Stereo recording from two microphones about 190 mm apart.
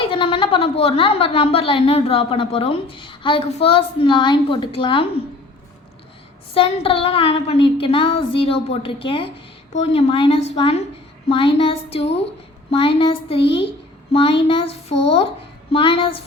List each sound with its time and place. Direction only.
0.0 s a woman's voice: 25° left (ahead or behind)
6.5 s a woman's voice: 30° left (ahead or behind)